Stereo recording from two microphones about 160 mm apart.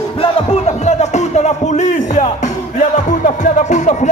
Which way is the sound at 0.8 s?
45° left (ahead or behind).